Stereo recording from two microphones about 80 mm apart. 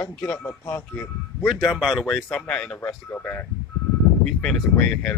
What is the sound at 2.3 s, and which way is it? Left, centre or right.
Speech, centre.